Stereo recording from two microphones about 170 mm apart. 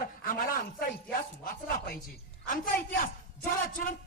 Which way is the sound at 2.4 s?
50° left (ahead or behind).